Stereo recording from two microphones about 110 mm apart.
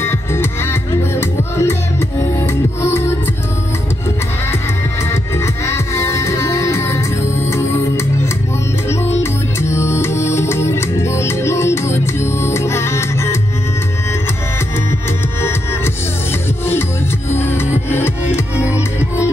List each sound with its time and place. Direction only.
0.0 s music: 20° left (ahead or behind)
5.1 s music: 25° left (ahead or behind)
17.4 s music: 20° left (ahead or behind)